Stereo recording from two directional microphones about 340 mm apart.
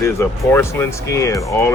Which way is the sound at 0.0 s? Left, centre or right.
Centre.